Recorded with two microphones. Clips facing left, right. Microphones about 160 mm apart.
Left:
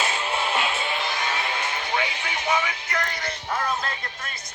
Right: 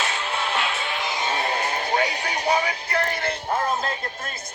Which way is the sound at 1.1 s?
25° right (ahead or behind).